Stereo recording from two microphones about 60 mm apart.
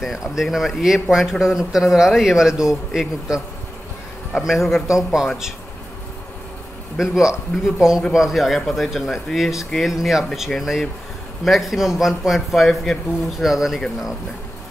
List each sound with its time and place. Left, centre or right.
0.0 s a man's voice: centre
7.0 s a man's voice: centre